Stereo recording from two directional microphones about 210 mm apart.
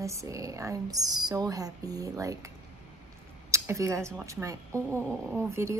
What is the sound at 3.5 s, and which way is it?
Speech, 15° right (ahead or behind).